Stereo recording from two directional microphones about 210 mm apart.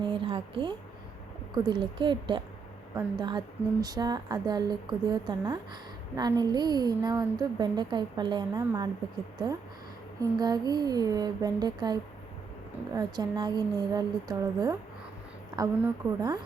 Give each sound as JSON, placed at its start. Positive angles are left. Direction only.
{"t": 0.0, "sound": "a woman's voice", "side_deg": -25}
{"t": 10.2, "sound": "a woman's voice", "side_deg": -20}